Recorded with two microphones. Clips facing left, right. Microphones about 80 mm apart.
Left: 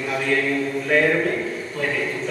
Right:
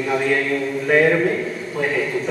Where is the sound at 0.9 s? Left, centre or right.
Centre.